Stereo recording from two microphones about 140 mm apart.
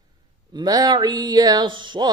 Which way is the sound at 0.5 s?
30° right (ahead or behind).